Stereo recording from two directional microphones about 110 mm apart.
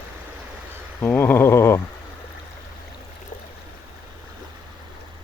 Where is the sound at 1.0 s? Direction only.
20° left (ahead or behind).